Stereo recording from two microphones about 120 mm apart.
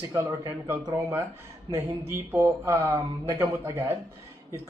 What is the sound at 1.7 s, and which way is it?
Speech, 20° right (ahead or behind).